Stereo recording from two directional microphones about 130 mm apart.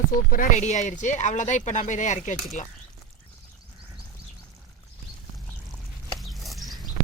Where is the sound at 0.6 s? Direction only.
65° left (ahead or behind).